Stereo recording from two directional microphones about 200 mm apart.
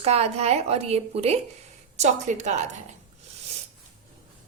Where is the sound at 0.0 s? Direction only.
30° right (ahead or behind).